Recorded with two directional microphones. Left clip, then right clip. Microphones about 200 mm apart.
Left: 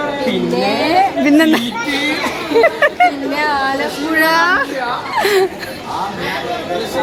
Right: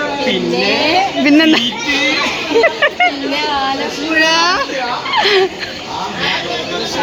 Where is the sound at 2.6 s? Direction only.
5° right (ahead or behind).